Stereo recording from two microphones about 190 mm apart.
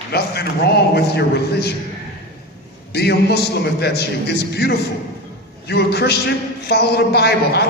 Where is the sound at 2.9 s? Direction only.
60° left (ahead or behind).